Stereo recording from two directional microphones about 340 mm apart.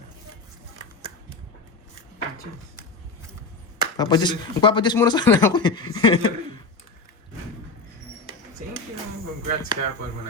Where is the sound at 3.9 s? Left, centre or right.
Centre.